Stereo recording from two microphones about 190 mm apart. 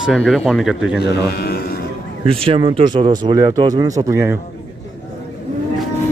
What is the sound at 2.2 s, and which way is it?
Speech, 30° right (ahead or behind).